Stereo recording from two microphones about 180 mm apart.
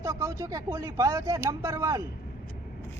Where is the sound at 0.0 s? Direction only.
15° right (ahead or behind).